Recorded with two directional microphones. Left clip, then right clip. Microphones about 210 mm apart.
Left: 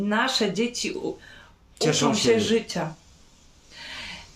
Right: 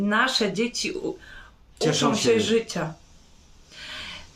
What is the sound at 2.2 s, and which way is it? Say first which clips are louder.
Speech: right 1 dB; 5° right (ahead or behind).